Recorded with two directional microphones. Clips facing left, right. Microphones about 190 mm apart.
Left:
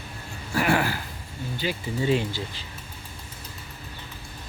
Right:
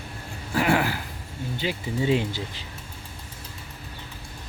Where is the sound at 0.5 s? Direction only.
20° right (ahead or behind).